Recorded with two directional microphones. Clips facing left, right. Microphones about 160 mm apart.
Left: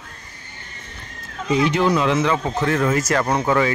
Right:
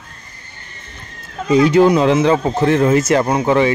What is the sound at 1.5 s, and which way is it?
A man's voice, 35° right (ahead or behind).